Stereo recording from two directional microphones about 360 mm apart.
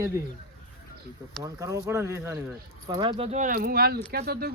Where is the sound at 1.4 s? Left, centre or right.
Centre; by 4.5 s right.